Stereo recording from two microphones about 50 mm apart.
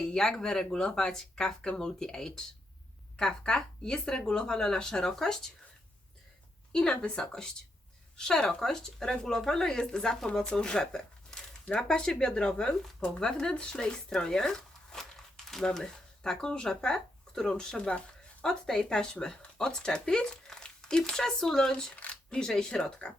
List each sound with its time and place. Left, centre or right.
0.0 s speech: centre
6.7 s speech: centre
21.9 s speech: left